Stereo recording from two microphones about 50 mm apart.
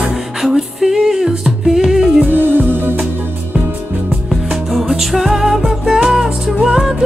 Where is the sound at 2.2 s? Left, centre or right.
Right.